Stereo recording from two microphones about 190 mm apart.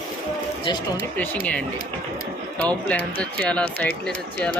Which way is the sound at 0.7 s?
25° left (ahead or behind).